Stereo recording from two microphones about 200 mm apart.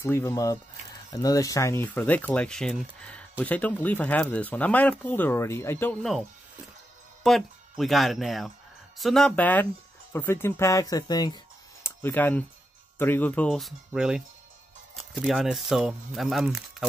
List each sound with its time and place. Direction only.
0.0 s speech: 10° left (ahead or behind)
7.2 s speech: centre (ahead or behind)